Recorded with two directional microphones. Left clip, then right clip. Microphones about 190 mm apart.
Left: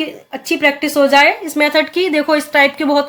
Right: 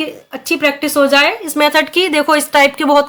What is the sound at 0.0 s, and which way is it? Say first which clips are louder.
Speech: right 1 dB; 20° right (ahead or behind).